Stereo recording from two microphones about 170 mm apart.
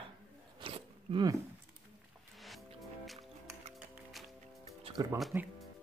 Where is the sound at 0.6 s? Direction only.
30° right (ahead or behind).